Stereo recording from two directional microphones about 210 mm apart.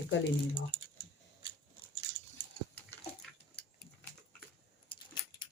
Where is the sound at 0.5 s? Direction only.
25° left (ahead or behind).